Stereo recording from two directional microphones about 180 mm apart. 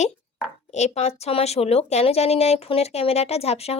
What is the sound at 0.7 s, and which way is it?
A woman's voice, 40° left (ahead or behind).